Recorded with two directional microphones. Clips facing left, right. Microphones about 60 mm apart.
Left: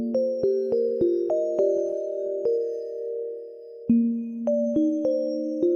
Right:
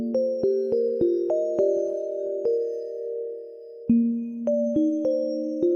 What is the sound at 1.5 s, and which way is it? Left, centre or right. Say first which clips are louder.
Music: even; right.